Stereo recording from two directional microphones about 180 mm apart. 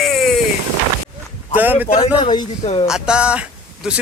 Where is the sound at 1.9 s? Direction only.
25° left (ahead or behind).